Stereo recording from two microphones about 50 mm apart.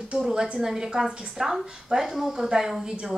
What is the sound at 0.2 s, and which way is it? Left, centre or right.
A woman's voice, centre.